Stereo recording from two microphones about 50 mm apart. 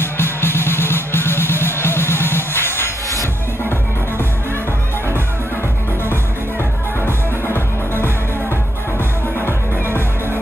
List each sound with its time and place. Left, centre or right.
0.0 s music: left
7.1 s music: left
9.5 s music: right